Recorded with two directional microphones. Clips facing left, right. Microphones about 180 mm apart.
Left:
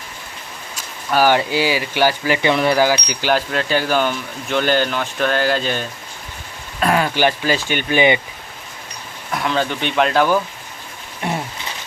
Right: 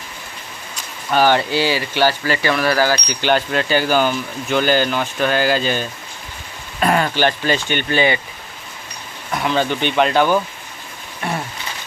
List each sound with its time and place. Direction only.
1.1 s speech: 10° left (ahead or behind)
3.2 s speech: centre (ahead or behind)
6.7 s rain on surface: centre (ahead or behind)
7.1 s speech: 10° left (ahead or behind)
9.3 s speech: centre (ahead or behind)
11.2 s a sound: 20° left (ahead or behind)